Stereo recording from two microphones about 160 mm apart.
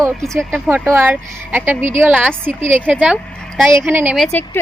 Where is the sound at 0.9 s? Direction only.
10° right (ahead or behind).